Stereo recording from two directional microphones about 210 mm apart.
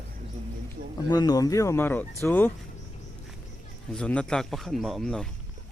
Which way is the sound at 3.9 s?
5° left (ahead or behind).